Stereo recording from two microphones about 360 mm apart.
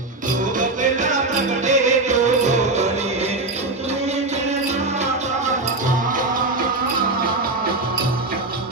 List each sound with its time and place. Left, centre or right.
0.6 s music: right